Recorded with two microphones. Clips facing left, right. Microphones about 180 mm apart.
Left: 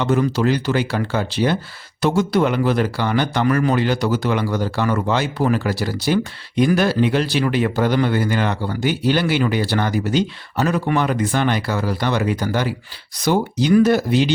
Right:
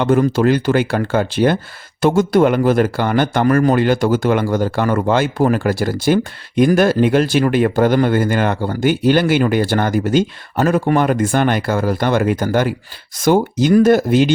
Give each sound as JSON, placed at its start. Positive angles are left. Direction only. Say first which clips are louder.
{"t": 0.0, "sound": "speech", "louder": "right 4 dB", "side_deg": -50}